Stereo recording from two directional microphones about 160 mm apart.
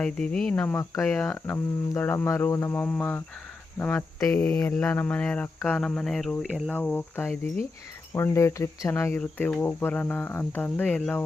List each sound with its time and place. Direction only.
0.0 s speech: 5° left (ahead or behind)